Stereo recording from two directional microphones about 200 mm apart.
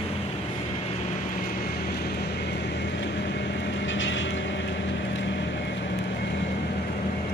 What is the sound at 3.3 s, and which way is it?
Vehicle, 65° left (ahead or behind).